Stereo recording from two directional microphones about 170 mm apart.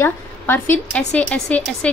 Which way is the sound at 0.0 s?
10° left (ahead or behind).